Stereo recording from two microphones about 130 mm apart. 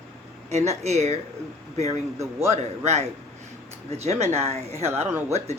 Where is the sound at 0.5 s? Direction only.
55° right (ahead or behind).